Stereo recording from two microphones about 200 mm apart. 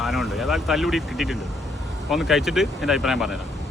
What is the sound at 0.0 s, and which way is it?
Speech, centre (ahead or behind).